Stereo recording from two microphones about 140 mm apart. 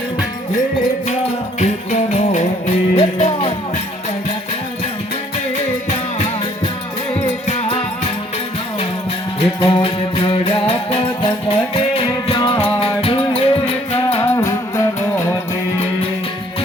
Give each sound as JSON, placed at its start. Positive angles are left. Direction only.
{"t": 1.5, "sound": "music", "side_deg": 55}
{"t": 7.1, "sound": "music", "side_deg": 50}
{"t": 9.6, "sound": "music", "side_deg": 40}
{"t": 14.2, "sound": "music", "side_deg": 25}